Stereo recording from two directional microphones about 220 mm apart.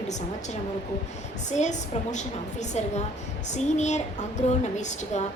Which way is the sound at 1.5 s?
35° left (ahead or behind).